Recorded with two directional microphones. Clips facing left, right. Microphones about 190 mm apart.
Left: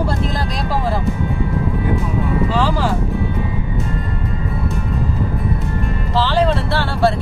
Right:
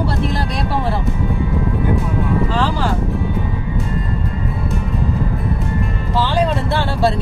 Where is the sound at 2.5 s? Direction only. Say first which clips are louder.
Left 1 dB; 5° left (ahead or behind).